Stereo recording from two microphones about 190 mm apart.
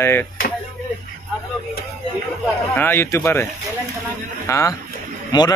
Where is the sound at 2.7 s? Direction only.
10° left (ahead or behind).